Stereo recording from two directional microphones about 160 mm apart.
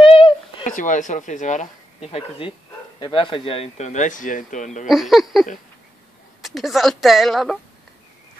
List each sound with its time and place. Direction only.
0.0 s a sound: 35° left (ahead or behind)
0.7 s speech: 55° left (ahead or behind)
4.8 s a woman's voice: centre (ahead or behind)